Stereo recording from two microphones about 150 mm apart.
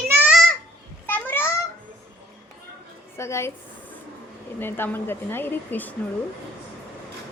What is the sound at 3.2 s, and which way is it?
Speech, 20° left (ahead or behind).